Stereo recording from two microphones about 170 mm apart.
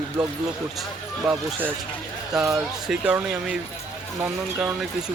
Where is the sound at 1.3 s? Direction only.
Centre (ahead or behind).